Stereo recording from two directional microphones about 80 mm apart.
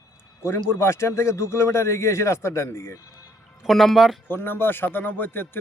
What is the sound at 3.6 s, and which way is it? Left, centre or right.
Speech, centre.